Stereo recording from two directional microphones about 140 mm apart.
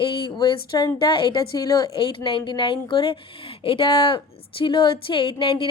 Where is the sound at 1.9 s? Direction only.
40° left (ahead or behind).